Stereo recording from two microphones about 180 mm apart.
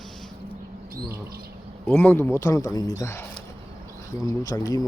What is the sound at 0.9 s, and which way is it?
Speech, 55° right (ahead or behind).